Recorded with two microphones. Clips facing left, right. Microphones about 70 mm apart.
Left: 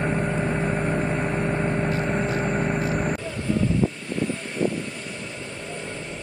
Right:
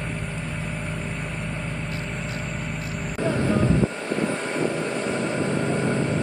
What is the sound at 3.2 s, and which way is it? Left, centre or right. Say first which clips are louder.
Vehicle: right 4 dB; right.